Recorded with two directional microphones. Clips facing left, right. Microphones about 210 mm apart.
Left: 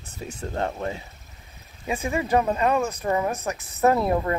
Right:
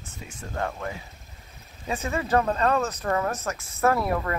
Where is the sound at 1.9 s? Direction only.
15° left (ahead or behind).